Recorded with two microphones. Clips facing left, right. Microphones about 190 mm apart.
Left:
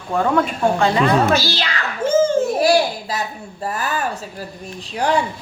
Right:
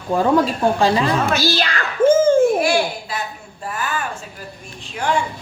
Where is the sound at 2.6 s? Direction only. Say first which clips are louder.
Left 3 dB; 40° left (ahead or behind).